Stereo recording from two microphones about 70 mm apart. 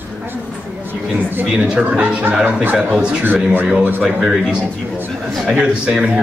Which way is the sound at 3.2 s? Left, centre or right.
Right.